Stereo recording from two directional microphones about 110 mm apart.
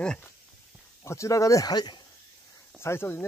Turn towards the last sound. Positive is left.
turn(degrees=25)  # may be behind; listen again after turning